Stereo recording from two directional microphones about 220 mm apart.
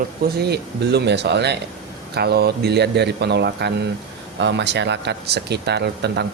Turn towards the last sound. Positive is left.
turn(degrees=-50)  # may be behind; listen again after turning